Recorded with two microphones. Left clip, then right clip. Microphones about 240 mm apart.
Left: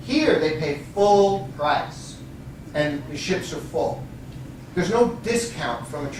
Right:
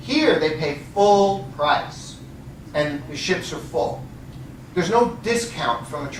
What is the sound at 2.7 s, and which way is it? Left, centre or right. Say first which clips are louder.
Speech: right 1 dB; centre.